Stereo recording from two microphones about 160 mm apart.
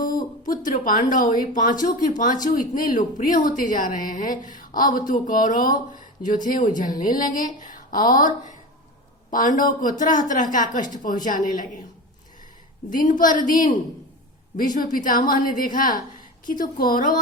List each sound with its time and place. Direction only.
0.4 s a woman's voice: 55° left (ahead or behind)
12.9 s a woman's voice: 60° left (ahead or behind)